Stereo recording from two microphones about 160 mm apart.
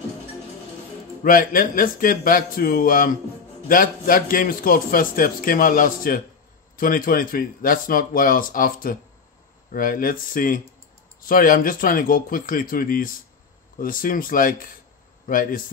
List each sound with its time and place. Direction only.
1.2 s a man's voice: 60° left (ahead or behind)